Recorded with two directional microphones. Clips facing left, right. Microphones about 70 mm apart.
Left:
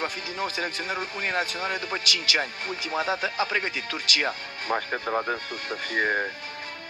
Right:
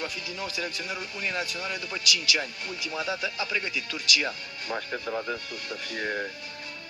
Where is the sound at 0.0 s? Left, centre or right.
Left.